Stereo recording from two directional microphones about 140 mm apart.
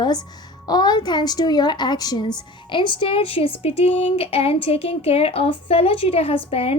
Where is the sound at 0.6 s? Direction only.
30° left (ahead or behind).